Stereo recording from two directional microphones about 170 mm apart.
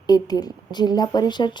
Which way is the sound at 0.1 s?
20° left (ahead or behind).